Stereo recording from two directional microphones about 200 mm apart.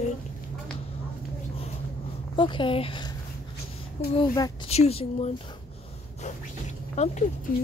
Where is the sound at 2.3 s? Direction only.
25° left (ahead or behind).